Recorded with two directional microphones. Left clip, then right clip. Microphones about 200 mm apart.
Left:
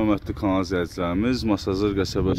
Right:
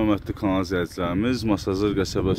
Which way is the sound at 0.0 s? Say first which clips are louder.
Even; 5° left (ahead or behind).